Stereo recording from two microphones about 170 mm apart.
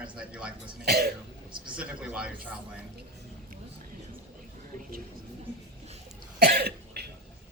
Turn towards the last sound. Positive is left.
turn(degrees=-70)  # may be behind; listen again after turning